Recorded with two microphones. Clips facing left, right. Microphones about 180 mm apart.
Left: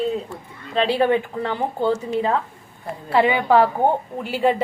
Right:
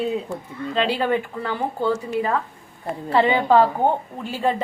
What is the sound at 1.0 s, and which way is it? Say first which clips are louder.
Speech: left 3 dB; 20° left (ahead or behind).